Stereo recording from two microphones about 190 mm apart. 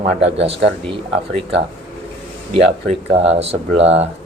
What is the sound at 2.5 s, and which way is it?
Speech, 30° right (ahead or behind).